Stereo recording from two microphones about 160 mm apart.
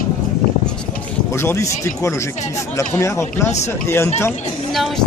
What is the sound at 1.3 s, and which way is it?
Speech, 15° left (ahead or behind).